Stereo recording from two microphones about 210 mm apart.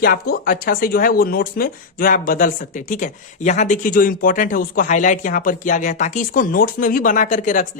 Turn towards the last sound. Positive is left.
turn(degrees=40)  # may be behind; listen again after turning